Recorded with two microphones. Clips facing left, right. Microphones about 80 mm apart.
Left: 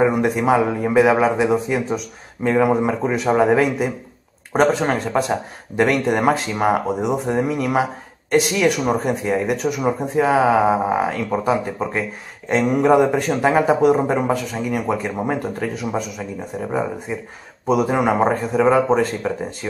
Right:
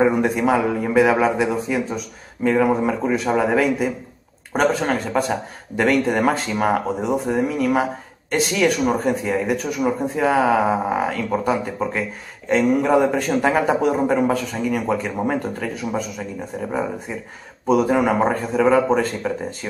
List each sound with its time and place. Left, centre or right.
0.0 s a man's voice: centre
17.6 s a man's voice: centre